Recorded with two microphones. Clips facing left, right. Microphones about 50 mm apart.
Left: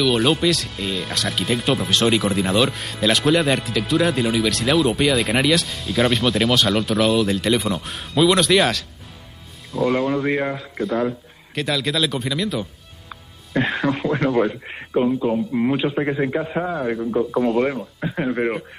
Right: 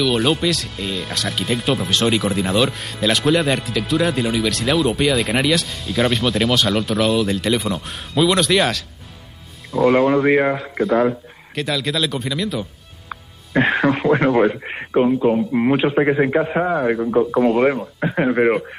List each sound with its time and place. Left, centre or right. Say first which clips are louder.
0.0 s speech: even; centre
14.2 s speech: right 4 dB; centre
17.3 s speech: right 3 dB; centre
18.0 s speech: right 6 dB; right